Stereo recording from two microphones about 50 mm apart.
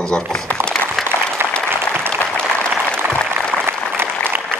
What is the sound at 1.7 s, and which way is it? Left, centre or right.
Applause, right.